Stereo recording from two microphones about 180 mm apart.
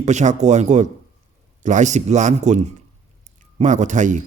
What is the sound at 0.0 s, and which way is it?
A man's voice, 40° right (ahead or behind).